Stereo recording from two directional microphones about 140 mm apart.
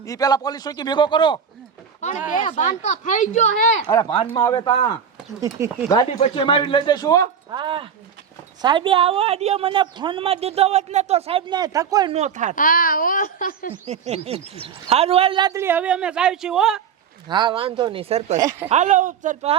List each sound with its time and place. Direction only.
0.0 s a man's voice: 25° left (ahead or behind)
2.0 s speech: 55° left (ahead or behind)
4.4 s a man's voice: 30° left (ahead or behind)
5.4 s speech: 20° right (ahead or behind)
6.3 s a man's voice: 35° left (ahead or behind)
7.5 s a woman's voice: 35° right (ahead or behind)
12.1 s speech: 55° right (ahead or behind)
12.5 s speech: 85° left
13.8 s a man's voice: 50° right (ahead or behind)
15.5 s speech: 15° right (ahead or behind)
17.2 s a woman's voice: 30° right (ahead or behind)
18.3 s speech: 25° right (ahead or behind)
18.7 s speech: 60° right (ahead or behind)